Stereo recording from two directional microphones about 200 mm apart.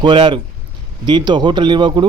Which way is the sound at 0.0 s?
25° right (ahead or behind).